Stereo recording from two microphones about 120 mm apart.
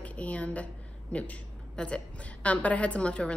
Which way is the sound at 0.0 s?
10° left (ahead or behind).